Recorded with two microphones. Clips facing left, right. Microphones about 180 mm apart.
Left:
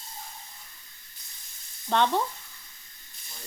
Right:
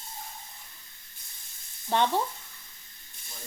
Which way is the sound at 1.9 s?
15° right (ahead or behind).